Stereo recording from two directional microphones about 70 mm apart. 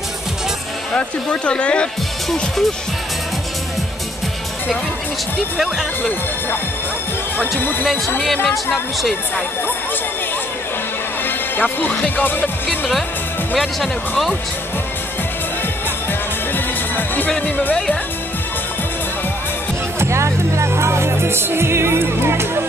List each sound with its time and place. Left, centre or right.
0.9 s speech: centre
2.2 s speech: centre
11.2 s music: left
12.2 s speech: left
12.6 s music: centre
16.1 s music: left
17.4 s speech: left
20.0 s music: right